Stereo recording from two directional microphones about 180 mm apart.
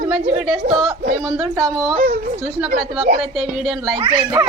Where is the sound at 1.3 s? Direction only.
20° right (ahead or behind).